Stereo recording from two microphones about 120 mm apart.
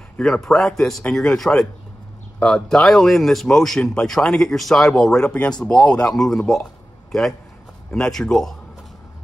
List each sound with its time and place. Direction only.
0.2 s a man's voice: 5° left (ahead or behind)